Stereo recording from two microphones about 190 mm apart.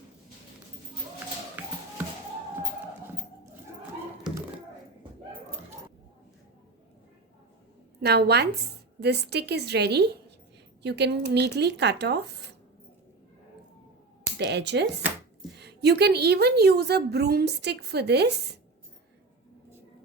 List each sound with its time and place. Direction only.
8.0 s a woman's voice: 60° right (ahead or behind)
14.3 s a woman's voice: 65° right (ahead or behind)